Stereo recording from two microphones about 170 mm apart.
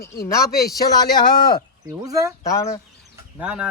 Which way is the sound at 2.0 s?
20° right (ahead or behind).